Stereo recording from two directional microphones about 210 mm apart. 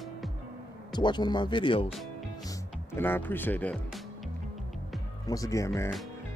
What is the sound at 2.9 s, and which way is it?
Speech, 10° left (ahead or behind).